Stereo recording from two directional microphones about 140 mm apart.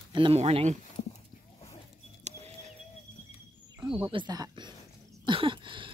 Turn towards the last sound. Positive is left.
turn(degrees=-35)  # may be behind; listen again after turning